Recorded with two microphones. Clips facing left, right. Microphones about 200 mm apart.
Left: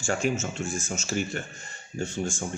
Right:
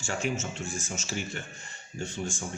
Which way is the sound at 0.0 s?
45° left (ahead or behind).